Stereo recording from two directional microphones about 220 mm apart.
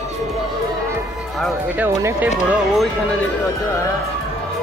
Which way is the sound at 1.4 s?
10° right (ahead or behind).